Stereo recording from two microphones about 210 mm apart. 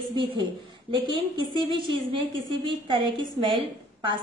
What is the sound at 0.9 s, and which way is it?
Speech, 20° right (ahead or behind).